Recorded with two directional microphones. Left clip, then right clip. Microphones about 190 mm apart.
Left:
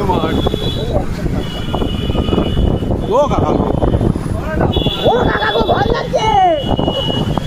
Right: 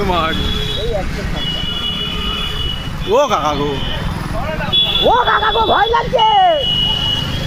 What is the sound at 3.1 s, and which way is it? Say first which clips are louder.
Speech: right 1 dB; 5° left (ahead or behind).